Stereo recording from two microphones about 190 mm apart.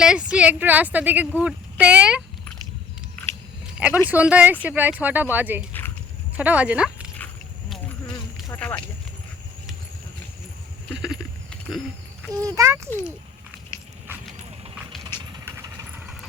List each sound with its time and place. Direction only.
0.0 s a woman's voice: 5° right (ahead or behind)
3.8 s a woman's voice: 5° right (ahead or behind)
8.4 s a sound: 5° left (ahead or behind)
11.0 s clip-clop: 5° right (ahead or behind)
12.3 s a woman's voice: 20° right (ahead or behind)
12.9 s a child's voice: 15° left (ahead or behind)
14.1 s clip-clop: 10° right (ahead or behind)
15.3 s vehicle: 15° right (ahead or behind)